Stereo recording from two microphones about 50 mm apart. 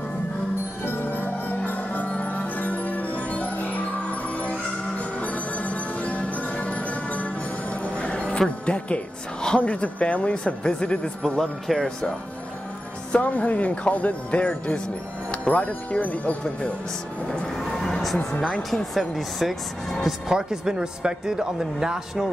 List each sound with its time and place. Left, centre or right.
0.8 s music: left
7.8 s a woman's voice: left
11.3 s speech: centre
13.2 s speech: left
17.3 s music: centre
18.9 s speech: centre
20.2 s speech: centre